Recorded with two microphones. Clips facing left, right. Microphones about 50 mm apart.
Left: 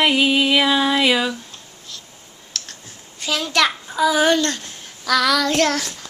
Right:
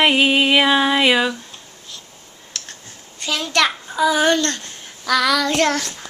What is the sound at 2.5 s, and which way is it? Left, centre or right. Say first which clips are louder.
Clicking: left 1 dB; centre.